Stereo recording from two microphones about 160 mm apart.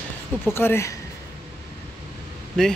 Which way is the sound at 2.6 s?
5° left (ahead or behind).